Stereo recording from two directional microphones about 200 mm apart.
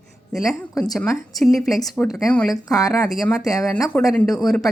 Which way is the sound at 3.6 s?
15° left (ahead or behind).